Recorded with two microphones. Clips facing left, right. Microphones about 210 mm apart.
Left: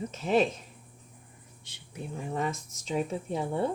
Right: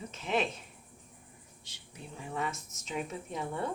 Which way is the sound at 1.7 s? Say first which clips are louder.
Left 2 dB; 55° left (ahead or behind).